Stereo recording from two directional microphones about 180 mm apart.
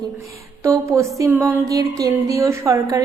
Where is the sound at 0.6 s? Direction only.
15° right (ahead or behind).